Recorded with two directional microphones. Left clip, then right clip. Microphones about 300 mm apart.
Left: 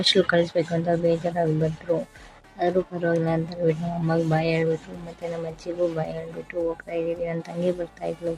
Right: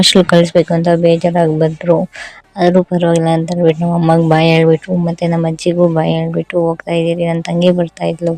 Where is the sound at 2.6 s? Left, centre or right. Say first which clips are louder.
Right 12 dB; right.